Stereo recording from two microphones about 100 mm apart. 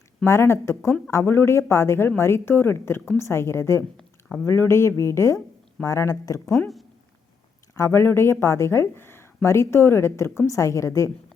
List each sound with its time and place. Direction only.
0.3 s speech: 25° left (ahead or behind)
7.8 s speech: 25° left (ahead or behind)